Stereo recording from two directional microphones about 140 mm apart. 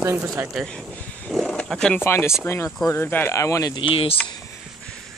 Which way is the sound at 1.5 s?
5° left (ahead or behind).